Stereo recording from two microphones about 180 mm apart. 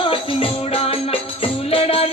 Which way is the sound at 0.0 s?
30° left (ahead or behind).